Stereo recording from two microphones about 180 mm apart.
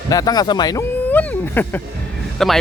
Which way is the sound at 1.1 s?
10° left (ahead or behind).